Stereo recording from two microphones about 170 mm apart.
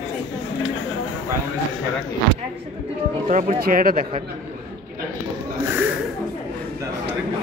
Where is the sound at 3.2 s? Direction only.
50° right (ahead or behind).